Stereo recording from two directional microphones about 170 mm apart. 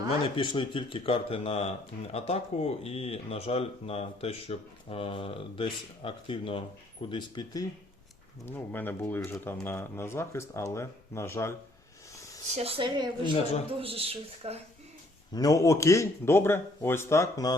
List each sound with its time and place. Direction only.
0.3 s speech: 30° left (ahead or behind)
8.4 s speech: 10° left (ahead or behind)
12.5 s speech: 35° right (ahead or behind)
15.3 s speech: 20° left (ahead or behind)